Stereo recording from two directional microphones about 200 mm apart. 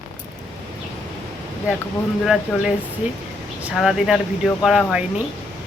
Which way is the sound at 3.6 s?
5° right (ahead or behind).